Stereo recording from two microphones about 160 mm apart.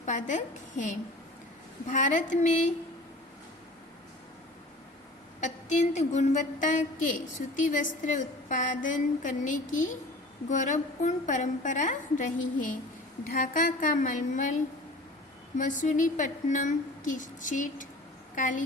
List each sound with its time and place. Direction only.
0.0 s a woman's voice: 50° left (ahead or behind)
5.4 s a woman's voice: 50° left (ahead or behind)
15.5 s a woman's voice: 50° left (ahead or behind)